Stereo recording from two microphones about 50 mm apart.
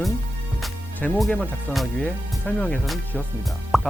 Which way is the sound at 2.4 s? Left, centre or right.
Left.